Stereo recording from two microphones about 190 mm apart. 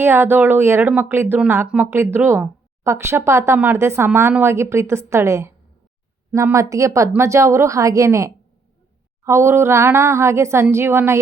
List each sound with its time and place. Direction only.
0.0 s speech: 10° right (ahead or behind)